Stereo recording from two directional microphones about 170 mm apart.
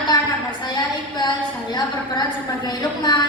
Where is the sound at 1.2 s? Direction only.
25° left (ahead or behind).